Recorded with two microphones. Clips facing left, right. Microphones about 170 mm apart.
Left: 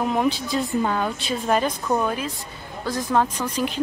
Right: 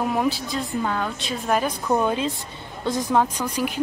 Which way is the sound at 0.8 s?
15° left (ahead or behind).